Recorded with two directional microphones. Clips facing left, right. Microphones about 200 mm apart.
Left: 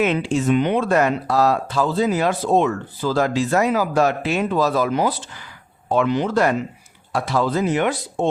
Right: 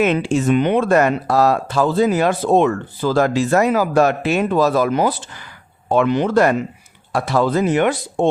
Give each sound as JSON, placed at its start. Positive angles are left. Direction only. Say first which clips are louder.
{"t": 0.0, "sound": "speech", "louder": "right 3 dB", "side_deg": -50}